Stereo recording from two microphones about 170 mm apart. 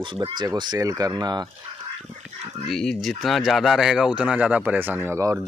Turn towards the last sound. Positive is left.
turn(degrees=-15)  # may be behind; listen again after turning